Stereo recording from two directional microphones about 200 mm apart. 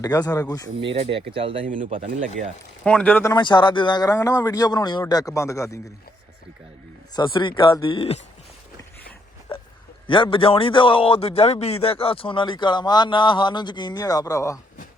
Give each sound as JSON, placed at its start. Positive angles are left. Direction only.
{"t": 0.0, "sound": "speech", "side_deg": 20}
{"t": 0.9, "sound": "speech", "side_deg": -25}
{"t": 2.8, "sound": "speech", "side_deg": 5}
{"t": 3.3, "sound": "a man's voice", "side_deg": 25}
{"t": 7.2, "sound": "a man's voice", "side_deg": 25}
{"t": 9.5, "sound": "a sound", "side_deg": 25}
{"t": 10.1, "sound": "a man's voice", "side_deg": 25}